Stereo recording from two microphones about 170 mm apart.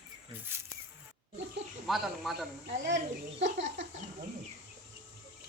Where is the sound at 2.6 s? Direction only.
80° right.